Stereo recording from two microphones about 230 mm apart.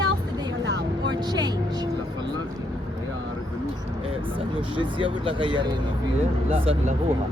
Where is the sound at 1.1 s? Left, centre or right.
Centre.